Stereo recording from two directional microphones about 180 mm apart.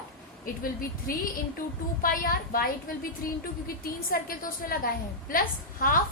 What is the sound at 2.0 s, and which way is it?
A woman's voice, 50° left (ahead or behind).